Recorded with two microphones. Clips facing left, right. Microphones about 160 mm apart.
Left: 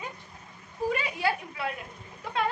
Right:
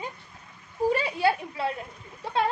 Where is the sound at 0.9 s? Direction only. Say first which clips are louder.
Right 4 dB; 30° right (ahead or behind).